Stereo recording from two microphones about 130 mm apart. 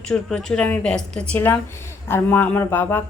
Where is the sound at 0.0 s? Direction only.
5° left (ahead or behind).